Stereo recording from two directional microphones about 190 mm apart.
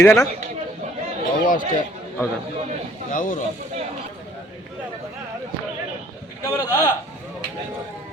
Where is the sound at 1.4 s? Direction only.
45° left (ahead or behind).